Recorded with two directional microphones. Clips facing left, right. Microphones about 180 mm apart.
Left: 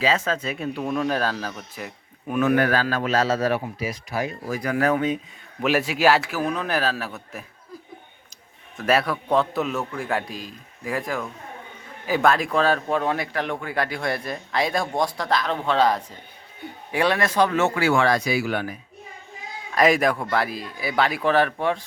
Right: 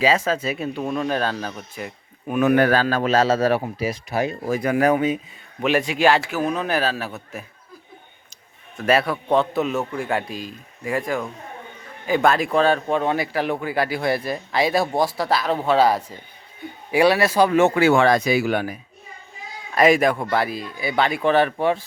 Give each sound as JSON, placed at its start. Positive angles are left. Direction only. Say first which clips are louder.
{"t": 0.0, "sound": "a man's voice", "louder": "right 3 dB", "side_deg": -10}
{"t": 2.6, "sound": "speech", "louder": "right 4 dB", "side_deg": -30}
{"t": 5.6, "sound": "speech", "louder": "right 1 dB", "side_deg": 5}
{"t": 8.8, "sound": "speech", "louder": "right 2 dB", "side_deg": 0}
{"t": 19.7, "sound": "speech", "louder": "right 3 dB", "side_deg": 0}